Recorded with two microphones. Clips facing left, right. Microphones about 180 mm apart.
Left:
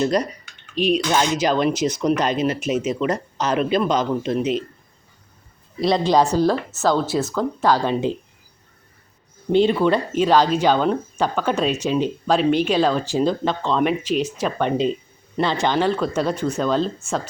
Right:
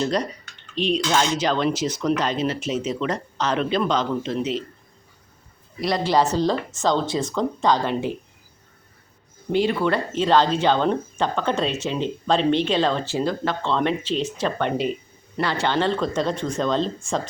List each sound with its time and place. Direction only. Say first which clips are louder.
0.8 s speech: left 2 dB; 10° left (ahead or behind)
5.8 s speech: left 3 dB; 20° left (ahead or behind)
9.5 s speech: left 4 dB; 25° left (ahead or behind); by 14.7 s 10° left (ahead or behind)
15.4 s speech: left 3 dB; 20° left (ahead or behind); by 17.2 s 5° left (ahead or behind)